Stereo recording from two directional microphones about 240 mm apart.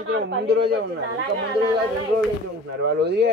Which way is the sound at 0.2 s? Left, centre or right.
Right.